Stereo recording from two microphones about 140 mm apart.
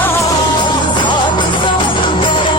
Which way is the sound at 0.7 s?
35° left (ahead or behind).